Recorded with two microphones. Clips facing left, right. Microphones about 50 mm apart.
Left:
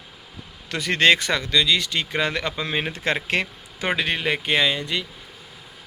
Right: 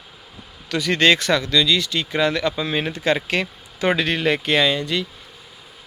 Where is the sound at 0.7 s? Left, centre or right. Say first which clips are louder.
Right 1 dB; left.